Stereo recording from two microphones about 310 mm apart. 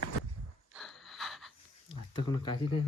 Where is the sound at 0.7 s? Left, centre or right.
Centre.